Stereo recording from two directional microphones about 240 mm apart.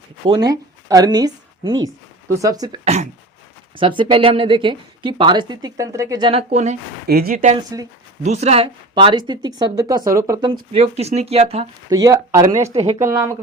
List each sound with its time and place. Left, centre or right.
0.3 s a woman's voice: centre
7.1 s speech: right
11.9 s speech: centre
12.7 s speech: right
13.1 s speech: centre